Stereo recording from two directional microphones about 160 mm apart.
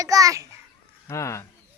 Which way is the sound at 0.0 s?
20° right (ahead or behind).